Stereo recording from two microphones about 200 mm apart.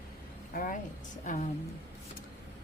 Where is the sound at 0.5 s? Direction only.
45° left (ahead or behind).